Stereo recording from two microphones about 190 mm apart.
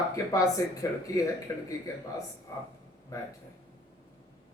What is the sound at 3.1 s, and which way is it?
Speech, 15° left (ahead or behind).